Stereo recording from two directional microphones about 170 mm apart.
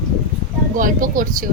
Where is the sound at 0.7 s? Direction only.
50° right (ahead or behind).